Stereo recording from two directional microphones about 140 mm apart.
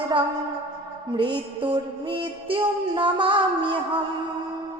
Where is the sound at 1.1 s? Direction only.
35° right (ahead or behind).